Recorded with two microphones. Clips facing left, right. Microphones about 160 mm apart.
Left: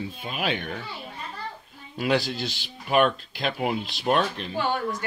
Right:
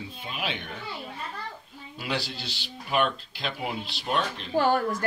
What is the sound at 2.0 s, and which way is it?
Speech, 50° left (ahead or behind).